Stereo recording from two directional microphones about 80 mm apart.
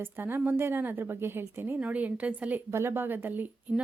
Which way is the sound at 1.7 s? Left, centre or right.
Centre.